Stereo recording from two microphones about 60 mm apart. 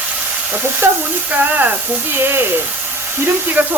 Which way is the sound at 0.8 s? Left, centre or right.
Right.